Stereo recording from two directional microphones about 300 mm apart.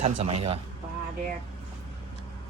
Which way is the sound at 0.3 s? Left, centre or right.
Right.